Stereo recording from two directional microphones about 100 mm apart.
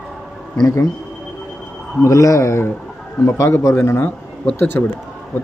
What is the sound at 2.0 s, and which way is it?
Speech, 35° left (ahead or behind).